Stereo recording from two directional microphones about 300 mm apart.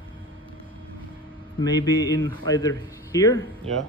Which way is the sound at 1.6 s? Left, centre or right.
Centre.